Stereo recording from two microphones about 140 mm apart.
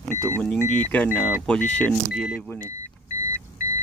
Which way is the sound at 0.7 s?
10° left (ahead or behind).